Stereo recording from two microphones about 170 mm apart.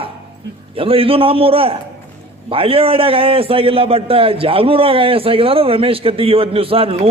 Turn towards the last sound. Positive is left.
turn(degrees=-35)  # may be behind; listen again after turning